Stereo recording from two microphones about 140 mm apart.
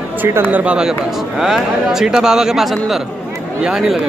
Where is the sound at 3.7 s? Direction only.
5° right (ahead or behind).